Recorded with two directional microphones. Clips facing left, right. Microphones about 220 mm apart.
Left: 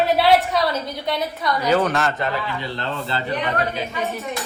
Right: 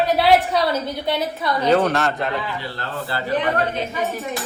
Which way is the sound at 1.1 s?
25° right (ahead or behind).